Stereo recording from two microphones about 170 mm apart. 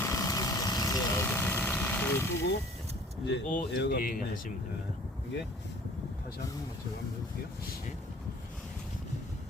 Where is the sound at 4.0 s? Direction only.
55° left (ahead or behind).